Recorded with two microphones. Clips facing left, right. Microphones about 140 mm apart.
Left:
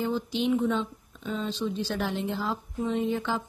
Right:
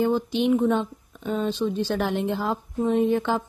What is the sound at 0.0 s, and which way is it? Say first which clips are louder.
Speech: right 6 dB; 55° right (ahead or behind).